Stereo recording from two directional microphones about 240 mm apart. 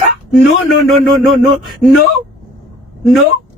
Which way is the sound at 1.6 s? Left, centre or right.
Centre.